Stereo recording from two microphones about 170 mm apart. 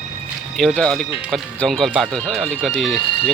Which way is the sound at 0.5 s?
5° left (ahead or behind).